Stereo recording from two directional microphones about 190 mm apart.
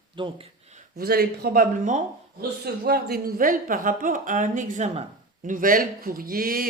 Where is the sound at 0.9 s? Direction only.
55° right (ahead or behind).